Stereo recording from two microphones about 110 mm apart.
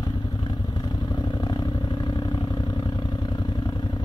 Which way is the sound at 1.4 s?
40° left (ahead or behind).